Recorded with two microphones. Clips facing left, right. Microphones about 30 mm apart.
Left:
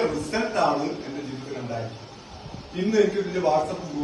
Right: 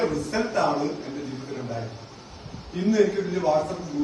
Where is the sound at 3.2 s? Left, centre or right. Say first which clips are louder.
Left 1 dB; left.